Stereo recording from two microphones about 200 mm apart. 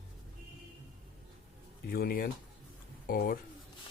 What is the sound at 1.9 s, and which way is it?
Speech, 45° left (ahead or behind).